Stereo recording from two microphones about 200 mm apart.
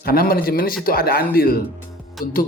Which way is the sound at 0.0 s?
50° left (ahead or behind).